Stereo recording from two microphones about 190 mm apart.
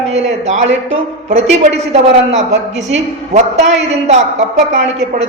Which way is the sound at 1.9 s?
35° right (ahead or behind).